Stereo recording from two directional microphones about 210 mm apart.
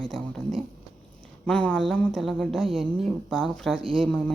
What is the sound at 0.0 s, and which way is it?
Speech, centre (ahead or behind).